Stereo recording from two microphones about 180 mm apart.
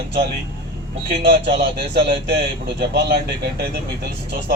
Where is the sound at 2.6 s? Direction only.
60° right (ahead or behind).